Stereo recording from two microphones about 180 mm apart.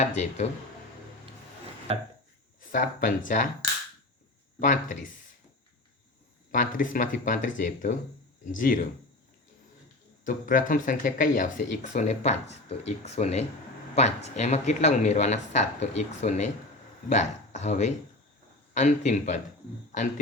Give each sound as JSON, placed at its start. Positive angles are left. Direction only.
{"t": 0.0, "sound": "speech", "side_deg": 40}
{"t": 1.9, "sound": "a sound", "side_deg": -30}
{"t": 2.6, "sound": "speech", "side_deg": 50}
{"t": 4.6, "sound": "speech", "side_deg": 45}
{"t": 6.5, "sound": "speech", "side_deg": 50}
{"t": 10.2, "sound": "speech", "side_deg": 50}